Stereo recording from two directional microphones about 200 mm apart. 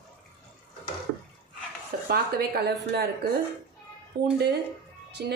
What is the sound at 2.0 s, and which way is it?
Speech, 50° right (ahead or behind).